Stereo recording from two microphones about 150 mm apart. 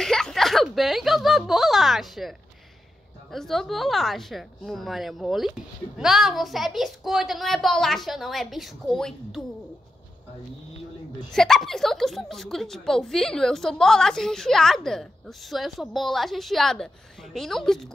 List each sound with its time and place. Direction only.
0.0 s a sound: 5° left (ahead or behind)
3.3 s a woman's voice: centre (ahead or behind)
11.3 s a woman's voice: centre (ahead or behind)